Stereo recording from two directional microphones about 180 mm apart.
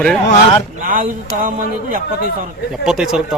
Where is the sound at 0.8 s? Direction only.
45° right (ahead or behind).